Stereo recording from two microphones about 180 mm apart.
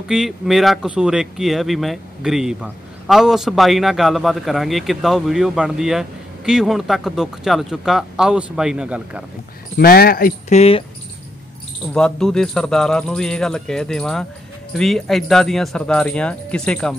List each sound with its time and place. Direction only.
0.1 s speech: centre (ahead or behind)
9.8 s speech: 60° left (ahead or behind)
10.5 s speech: 35° left (ahead or behind)
11.9 s speech: 5° left (ahead or behind)